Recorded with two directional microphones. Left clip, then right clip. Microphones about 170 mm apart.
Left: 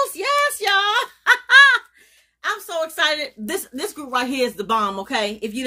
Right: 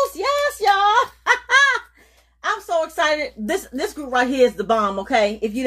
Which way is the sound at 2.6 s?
15° left (ahead or behind).